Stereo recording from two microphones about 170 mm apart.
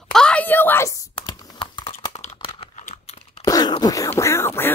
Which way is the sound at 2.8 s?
45° left (ahead or behind).